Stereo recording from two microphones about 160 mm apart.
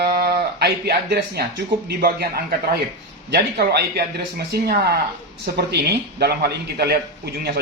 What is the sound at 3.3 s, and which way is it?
A man's voice, 85° right.